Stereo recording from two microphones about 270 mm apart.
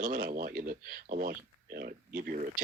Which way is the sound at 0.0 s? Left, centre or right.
Right.